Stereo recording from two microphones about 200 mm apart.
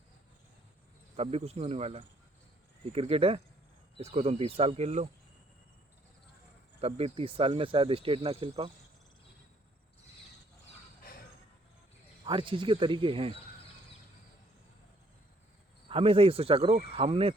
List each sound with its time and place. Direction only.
1.1 s speech: 30° right (ahead or behind)
6.8 s speech: 30° right (ahead or behind)
11.1 s a sound: 50° left (ahead or behind)
12.2 s speech: 25° right (ahead or behind)
15.9 s speech: 25° right (ahead or behind)